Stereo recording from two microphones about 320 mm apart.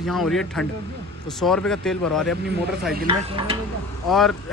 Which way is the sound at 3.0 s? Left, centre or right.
Centre.